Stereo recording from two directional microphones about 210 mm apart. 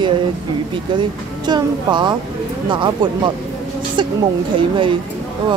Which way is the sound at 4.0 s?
20° right (ahead or behind).